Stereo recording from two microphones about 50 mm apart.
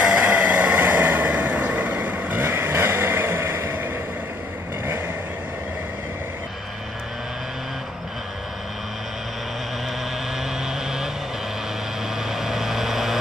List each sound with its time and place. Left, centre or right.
0.0 s vehicle: right
10.7 s vehicle: centre
12.3 s vehicle: centre